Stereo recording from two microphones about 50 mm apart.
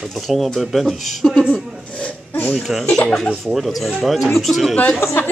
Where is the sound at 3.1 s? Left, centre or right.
Centre.